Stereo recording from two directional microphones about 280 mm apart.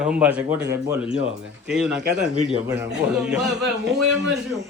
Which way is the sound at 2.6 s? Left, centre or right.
Centre.